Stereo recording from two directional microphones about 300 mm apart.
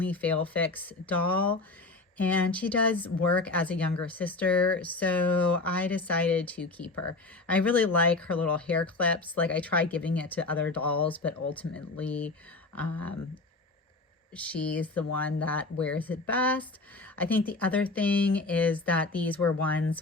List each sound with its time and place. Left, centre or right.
0.0 s speech: centre